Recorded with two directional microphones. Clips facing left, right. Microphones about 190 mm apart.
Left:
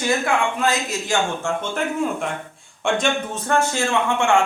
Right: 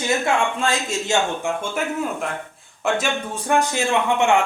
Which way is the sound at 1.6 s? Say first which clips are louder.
Left 1 dB; 5° right (ahead or behind).